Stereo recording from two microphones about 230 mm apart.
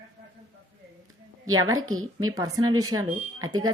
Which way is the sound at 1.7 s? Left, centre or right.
Right.